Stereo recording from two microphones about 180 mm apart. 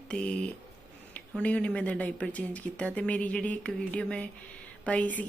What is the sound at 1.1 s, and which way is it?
Speech, 5° left (ahead or behind).